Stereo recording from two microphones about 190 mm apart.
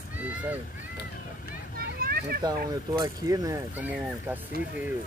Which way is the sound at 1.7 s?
50° right (ahead or behind).